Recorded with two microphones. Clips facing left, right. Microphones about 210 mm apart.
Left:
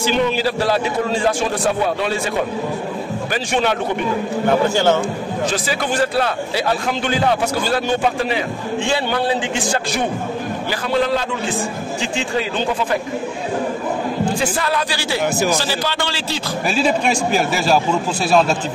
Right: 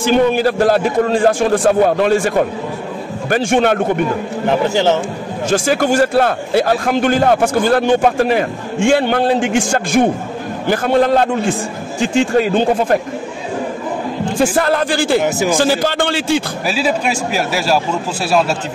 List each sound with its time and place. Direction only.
0.0 s a man's voice: 50° right (ahead or behind)
4.5 s a man's voice: 20° right (ahead or behind)
5.5 s a man's voice: 45° right (ahead or behind)
14.4 s a man's voice: 50° right (ahead or behind)
16.6 s a man's voice: 5° right (ahead or behind)